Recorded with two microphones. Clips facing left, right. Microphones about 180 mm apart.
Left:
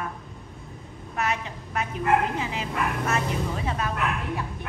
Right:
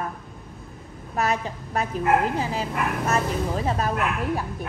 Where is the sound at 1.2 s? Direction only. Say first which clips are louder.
Right 4 dB; 35° right (ahead or behind).